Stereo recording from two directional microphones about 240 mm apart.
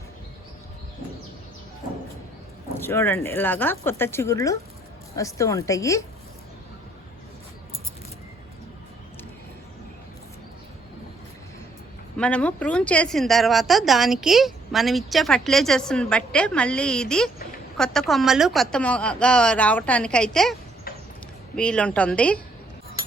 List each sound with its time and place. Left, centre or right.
2.8 s speech: centre
12.1 s a woman's voice: centre